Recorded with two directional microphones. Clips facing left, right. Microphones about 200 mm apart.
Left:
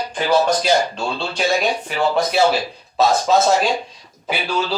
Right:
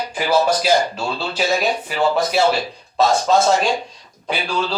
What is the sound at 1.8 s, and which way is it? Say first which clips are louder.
Speech: even; centre (ahead or behind).